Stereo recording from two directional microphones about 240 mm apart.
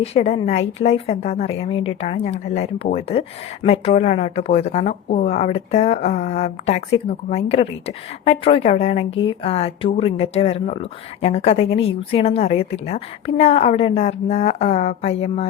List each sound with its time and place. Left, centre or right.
0.0 s a woman's voice: left